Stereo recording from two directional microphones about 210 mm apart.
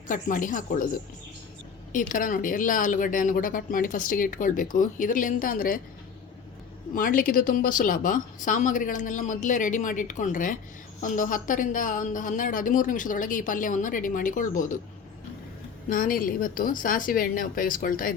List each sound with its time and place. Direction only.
0.1 s speech: 40° left (ahead or behind)
1.9 s speech: 40° left (ahead or behind)
6.9 s speech: 40° left (ahead or behind)
15.9 s speech: 40° left (ahead or behind)